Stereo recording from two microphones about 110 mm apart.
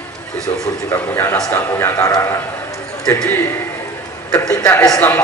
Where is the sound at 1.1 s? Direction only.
20° left (ahead or behind).